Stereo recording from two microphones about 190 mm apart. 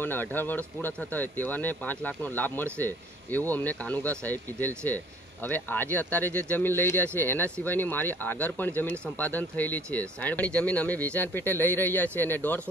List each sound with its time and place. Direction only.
0.0 s speech: 10° left (ahead or behind)